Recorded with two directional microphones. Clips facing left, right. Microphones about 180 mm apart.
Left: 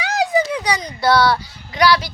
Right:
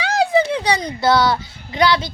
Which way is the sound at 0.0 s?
30° right (ahead or behind).